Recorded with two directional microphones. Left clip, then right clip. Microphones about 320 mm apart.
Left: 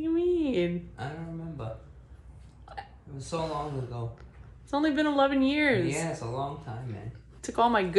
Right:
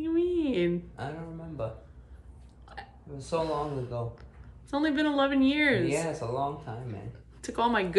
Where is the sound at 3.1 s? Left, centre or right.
Centre.